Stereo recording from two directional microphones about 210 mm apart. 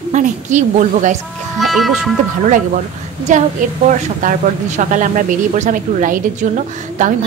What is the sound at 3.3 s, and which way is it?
A woman's voice, 35° right (ahead or behind).